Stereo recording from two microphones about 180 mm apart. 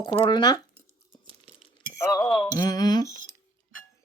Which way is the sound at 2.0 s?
20° left (ahead or behind).